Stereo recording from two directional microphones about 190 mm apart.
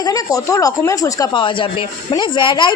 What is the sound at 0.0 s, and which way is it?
Speech, 20° left (ahead or behind).